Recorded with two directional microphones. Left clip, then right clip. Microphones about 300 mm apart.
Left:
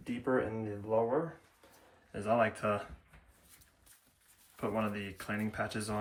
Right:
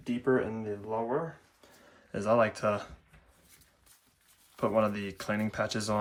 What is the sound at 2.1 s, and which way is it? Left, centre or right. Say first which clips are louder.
Speech: right 4 dB; centre.